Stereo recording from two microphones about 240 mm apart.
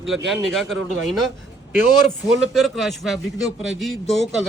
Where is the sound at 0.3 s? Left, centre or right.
Centre.